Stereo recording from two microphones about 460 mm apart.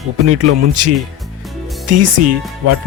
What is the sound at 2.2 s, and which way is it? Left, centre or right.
Speech, right.